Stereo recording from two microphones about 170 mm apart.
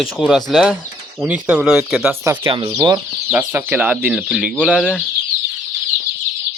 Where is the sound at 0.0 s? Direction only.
Centre (ahead or behind).